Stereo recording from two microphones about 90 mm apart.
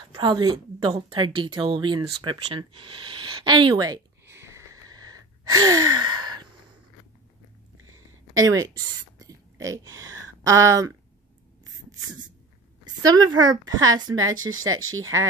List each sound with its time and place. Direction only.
0.2 s a woman's voice: 55° right (ahead or behind)
1.1 s speech: 70° right (ahead or behind); by 4.0 s 50° right (ahead or behind)
4.3 s a sound: 30° right (ahead or behind)
4.8 s gasp: 45° right (ahead or behind)
5.9 s gasp: 55° right (ahead or behind)
8.4 s a woman's voice: 40° right (ahead or behind)
12.8 s a woman's voice: 50° right (ahead or behind)